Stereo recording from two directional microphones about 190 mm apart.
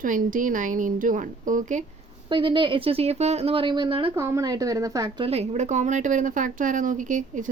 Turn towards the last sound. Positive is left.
turn(degrees=-40)  # may be behind; listen again after turning